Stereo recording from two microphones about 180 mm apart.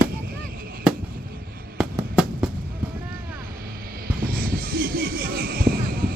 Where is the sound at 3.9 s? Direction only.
55° right (ahead or behind).